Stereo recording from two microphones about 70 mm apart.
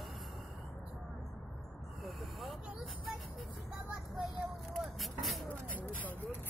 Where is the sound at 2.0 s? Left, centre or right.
Centre.